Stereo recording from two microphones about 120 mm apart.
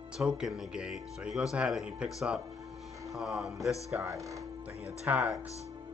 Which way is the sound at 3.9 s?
25° right (ahead or behind).